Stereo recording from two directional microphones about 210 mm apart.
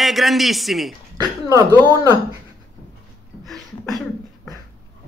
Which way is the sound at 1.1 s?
20° right (ahead or behind).